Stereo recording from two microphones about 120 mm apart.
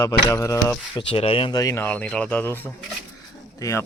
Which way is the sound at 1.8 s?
10° left (ahead or behind).